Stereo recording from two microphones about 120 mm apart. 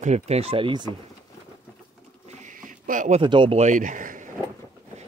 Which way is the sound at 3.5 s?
85° right.